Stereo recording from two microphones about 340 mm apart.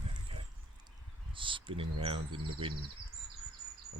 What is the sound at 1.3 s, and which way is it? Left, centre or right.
Speech, centre.